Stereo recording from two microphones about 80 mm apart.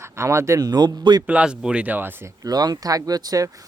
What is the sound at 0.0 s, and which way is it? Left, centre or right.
Speech, right.